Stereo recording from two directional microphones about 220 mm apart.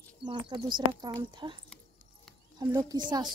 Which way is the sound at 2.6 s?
15° right (ahead or behind).